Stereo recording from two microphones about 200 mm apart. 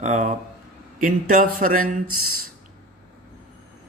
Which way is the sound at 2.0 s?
90° right.